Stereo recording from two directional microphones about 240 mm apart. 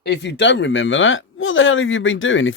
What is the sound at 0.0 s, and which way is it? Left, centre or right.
Speech, left.